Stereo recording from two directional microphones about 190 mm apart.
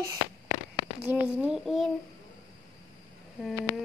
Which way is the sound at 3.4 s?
5° right (ahead or behind).